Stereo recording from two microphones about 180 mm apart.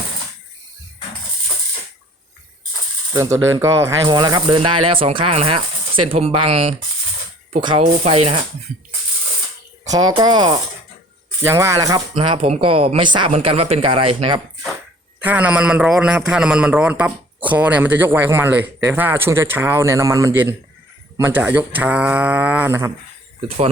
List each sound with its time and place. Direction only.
3.1 s speech: 15° right (ahead or behind); by 8.4 s 35° right (ahead or behind)
9.9 s speech: 20° right (ahead or behind)
15.2 s a man's voice: 10° right (ahead or behind)